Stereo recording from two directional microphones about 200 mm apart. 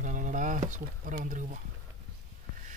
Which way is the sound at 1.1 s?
40° right (ahead or behind).